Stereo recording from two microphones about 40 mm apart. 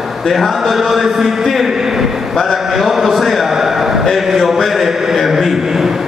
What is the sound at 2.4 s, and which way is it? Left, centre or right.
A man's voice, centre.